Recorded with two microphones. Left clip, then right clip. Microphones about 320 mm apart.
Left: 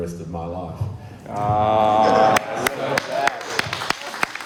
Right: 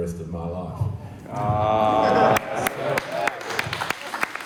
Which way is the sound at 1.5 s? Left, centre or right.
Left.